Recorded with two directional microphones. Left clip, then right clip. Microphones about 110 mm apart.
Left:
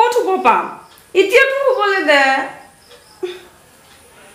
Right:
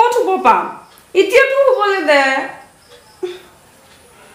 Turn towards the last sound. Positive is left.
turn(degrees=-5)  # may be behind; listen again after turning